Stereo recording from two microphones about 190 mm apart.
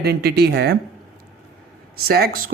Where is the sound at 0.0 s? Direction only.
60° right (ahead or behind).